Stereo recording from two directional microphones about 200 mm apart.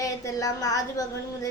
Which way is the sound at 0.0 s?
15° left (ahead or behind).